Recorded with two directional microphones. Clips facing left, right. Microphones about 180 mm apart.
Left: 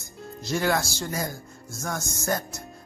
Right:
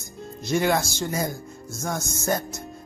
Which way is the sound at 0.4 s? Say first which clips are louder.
Right 3 dB; 20° right (ahead or behind).